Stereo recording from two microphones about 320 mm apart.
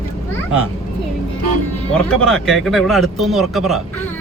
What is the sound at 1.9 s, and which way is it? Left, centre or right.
Speech, centre.